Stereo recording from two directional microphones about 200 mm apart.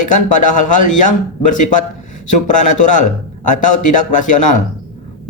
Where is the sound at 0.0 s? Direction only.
40° left (ahead or behind).